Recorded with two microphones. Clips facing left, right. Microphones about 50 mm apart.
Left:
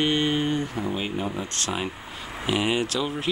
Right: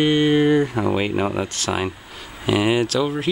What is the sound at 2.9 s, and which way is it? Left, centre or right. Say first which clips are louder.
Speech: right 6 dB; right.